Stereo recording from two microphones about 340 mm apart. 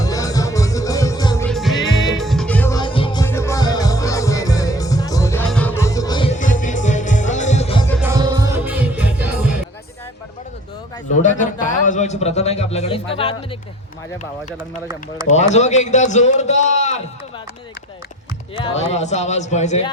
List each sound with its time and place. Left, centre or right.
0.0 s music: centre
8.0 s music: centre
11.2 s a man's voice: left
15.3 s a man's voice: centre
18.5 s a man's voice: centre